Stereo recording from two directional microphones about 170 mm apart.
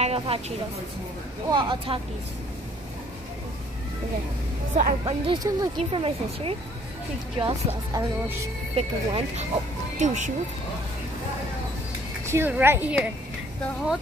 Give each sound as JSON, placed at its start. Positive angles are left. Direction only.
{"t": 0.0, "sound": "a sound", "side_deg": -35}
{"t": 1.5, "sound": "speech", "side_deg": -25}
{"t": 5.0, "sound": "speech", "side_deg": -30}
{"t": 12.3, "sound": "speech", "side_deg": -15}